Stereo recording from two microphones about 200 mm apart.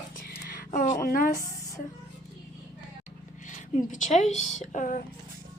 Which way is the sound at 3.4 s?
40° left (ahead or behind).